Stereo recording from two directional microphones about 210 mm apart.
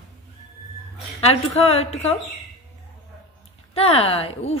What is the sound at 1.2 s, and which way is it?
Speech, 30° left (ahead or behind).